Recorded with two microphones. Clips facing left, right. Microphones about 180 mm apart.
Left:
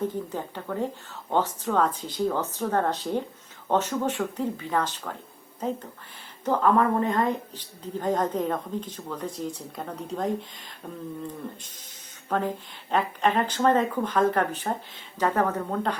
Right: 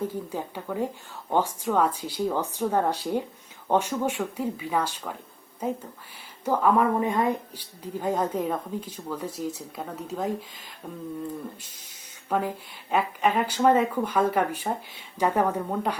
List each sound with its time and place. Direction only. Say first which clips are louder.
0.0 s a woman's voice: left 1 dB; 10° right (ahead or behind)
12.3 s a woman's voice: even; 10° right (ahead or behind)